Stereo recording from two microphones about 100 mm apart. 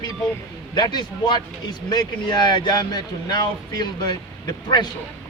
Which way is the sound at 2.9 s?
45° left (ahead or behind).